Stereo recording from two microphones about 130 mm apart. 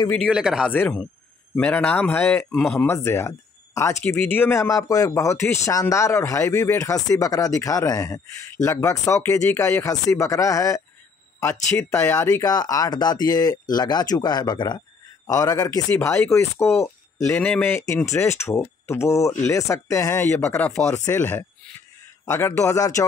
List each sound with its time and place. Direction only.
0.3 s speech: 5° right (ahead or behind)
0.7 s speech: 15° left (ahead or behind)
2.9 s speech: 20° left (ahead or behind)
11.9 s speech: 20° left (ahead or behind)
20.9 s speech: 20° left (ahead or behind)